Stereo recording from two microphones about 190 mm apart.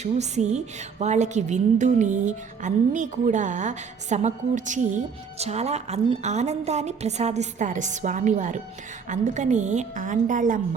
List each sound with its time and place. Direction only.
0.0 s a woman's voice: 35° right (ahead or behind)